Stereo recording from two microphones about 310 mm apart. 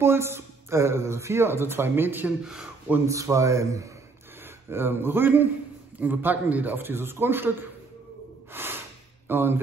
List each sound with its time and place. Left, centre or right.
0.0 s speech: centre
8.5 s snort: centre
9.3 s speech: centre